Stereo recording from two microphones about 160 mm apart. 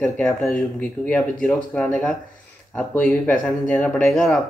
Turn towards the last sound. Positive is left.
turn(degrees=0)  # may be behind; listen again after turning